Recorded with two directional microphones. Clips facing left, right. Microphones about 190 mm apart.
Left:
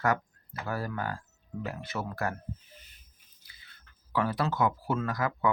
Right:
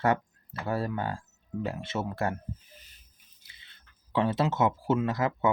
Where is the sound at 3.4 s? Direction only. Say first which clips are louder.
Left 1 dB; 25° right (ahead or behind).